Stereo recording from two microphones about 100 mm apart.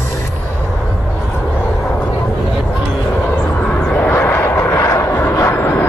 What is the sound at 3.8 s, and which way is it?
Vehicle, 15° left (ahead or behind).